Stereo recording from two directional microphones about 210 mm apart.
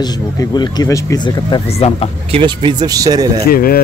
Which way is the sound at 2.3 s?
25° right (ahead or behind).